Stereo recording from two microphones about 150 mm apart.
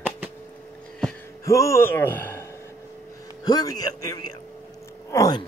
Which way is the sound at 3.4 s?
25° left (ahead or behind).